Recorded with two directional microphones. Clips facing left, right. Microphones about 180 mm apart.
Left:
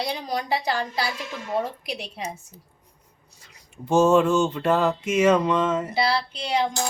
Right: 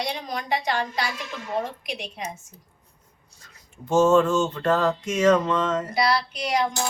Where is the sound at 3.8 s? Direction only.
10° left (ahead or behind).